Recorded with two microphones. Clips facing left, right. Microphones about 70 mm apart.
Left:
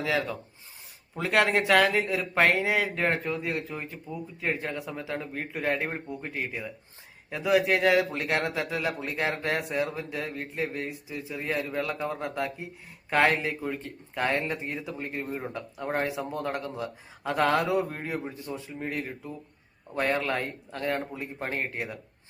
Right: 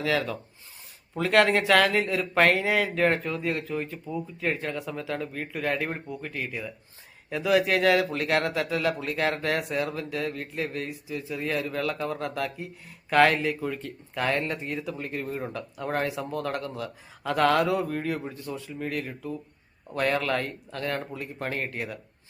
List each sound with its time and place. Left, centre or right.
0.0 s speech: centre
14.3 s speech: centre
14.6 s speech: centre